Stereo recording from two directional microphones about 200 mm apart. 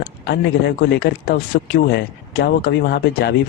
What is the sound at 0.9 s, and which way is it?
Speech, 50° left (ahead or behind).